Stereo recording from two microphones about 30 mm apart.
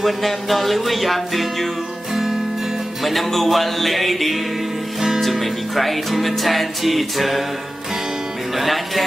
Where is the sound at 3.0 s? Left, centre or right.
Centre.